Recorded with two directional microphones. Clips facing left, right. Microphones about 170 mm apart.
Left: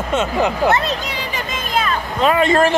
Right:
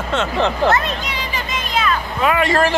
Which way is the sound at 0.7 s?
30° left (ahead or behind).